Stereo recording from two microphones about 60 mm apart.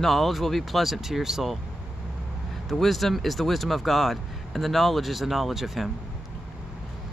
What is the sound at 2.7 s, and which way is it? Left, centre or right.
Speech, centre.